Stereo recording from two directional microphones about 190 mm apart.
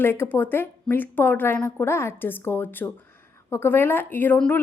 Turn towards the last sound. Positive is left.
turn(degrees=10)  # may be behind; listen again after turning